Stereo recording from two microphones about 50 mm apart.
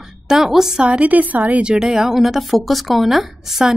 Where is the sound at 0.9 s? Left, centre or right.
Right.